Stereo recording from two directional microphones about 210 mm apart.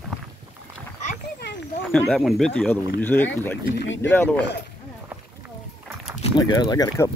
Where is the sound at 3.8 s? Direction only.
60° left (ahead or behind).